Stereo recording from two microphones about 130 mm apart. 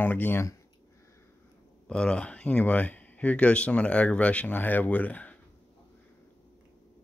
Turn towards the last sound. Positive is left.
turn(degrees=10)  # may be behind; listen again after turning